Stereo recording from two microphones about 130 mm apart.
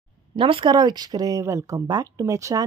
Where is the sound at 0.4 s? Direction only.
40° right (ahead or behind).